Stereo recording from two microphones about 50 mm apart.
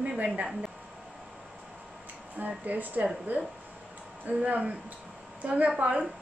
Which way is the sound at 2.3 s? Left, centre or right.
Right.